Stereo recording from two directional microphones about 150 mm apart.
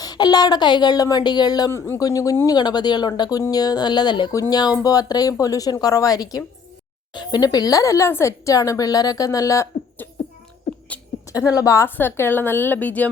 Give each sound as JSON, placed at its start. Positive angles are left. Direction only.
{"t": 0.0, "sound": "speech", "side_deg": 25}
{"t": 11.5, "sound": "a woman's voice", "side_deg": 20}